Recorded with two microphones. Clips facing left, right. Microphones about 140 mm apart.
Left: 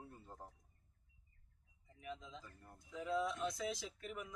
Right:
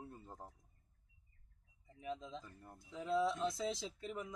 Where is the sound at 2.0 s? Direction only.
25° right (ahead or behind).